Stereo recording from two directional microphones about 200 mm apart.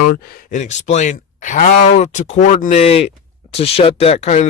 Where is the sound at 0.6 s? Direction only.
35° left (ahead or behind).